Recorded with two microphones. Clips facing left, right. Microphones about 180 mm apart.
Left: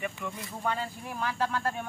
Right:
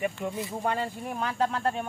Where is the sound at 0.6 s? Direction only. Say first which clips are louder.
Right 2 dB; 45° right (ahead or behind).